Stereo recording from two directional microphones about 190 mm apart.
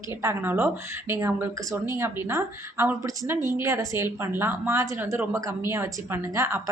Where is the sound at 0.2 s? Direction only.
15° right (ahead or behind).